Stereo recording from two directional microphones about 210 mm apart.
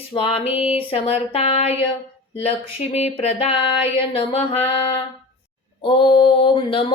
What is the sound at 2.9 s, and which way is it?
Speech, 30° left (ahead or behind).